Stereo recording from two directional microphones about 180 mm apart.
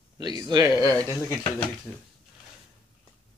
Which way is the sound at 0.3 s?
20° right (ahead or behind).